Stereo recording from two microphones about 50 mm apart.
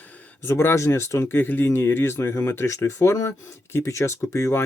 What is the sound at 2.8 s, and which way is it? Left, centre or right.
Speech, left.